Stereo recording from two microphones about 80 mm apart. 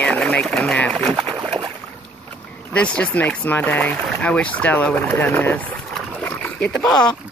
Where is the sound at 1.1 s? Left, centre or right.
Right.